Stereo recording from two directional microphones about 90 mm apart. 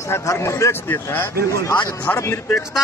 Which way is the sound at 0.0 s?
35° left (ahead or behind).